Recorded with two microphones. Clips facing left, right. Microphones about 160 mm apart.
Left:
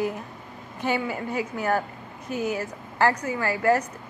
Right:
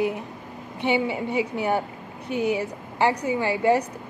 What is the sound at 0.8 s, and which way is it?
Speech, 20° right (ahead or behind).